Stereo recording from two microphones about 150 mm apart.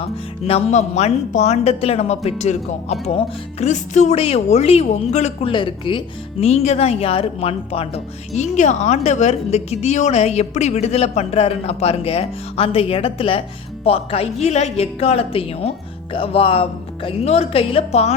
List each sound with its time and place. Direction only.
0.0 s speech: 40° left (ahead or behind)
5.5 s speech: 35° left (ahead or behind)
6.4 s speech: 45° left (ahead or behind)